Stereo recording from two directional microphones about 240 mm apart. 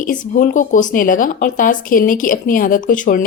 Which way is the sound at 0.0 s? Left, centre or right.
Left.